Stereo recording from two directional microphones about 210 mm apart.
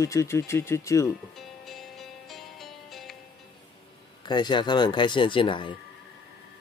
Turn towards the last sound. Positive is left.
turn(degrees=25)  # may be behind; listen again after turning